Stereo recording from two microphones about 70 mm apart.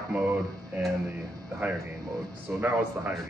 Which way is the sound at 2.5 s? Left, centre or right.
Right.